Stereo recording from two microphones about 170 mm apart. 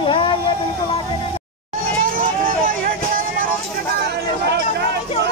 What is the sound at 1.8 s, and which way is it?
Vehicle, 55° right (ahead or behind).